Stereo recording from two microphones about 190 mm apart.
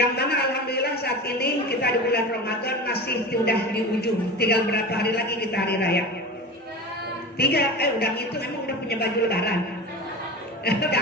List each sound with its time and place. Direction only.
0.2 s a sound: 55° left (ahead or behind)
2.6 s a woman's voice: 55° left (ahead or behind)
7.3 s a woman's voice: 55° left (ahead or behind)
10.7 s a woman's voice: 55° left (ahead or behind)